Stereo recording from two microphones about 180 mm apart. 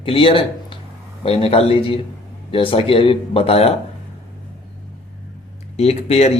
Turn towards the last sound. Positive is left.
turn(degrees=35)  # may be behind; listen again after turning